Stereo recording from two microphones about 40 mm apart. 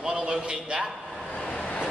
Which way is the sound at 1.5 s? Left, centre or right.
Left.